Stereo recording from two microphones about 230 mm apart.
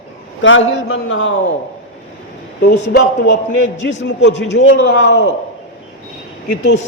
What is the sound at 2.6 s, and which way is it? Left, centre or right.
A man's voice, left.